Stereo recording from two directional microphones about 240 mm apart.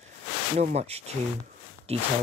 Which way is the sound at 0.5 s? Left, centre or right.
Right.